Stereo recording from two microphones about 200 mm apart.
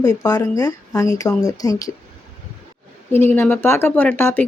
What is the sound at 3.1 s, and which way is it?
Speech, 10° left (ahead or behind).